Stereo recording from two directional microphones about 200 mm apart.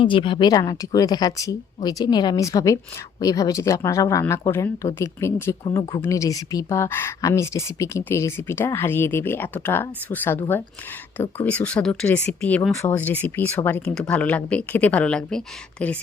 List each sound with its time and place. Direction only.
0.0 s speech: 25° left (ahead or behind); by 16.0 s 5° left (ahead or behind)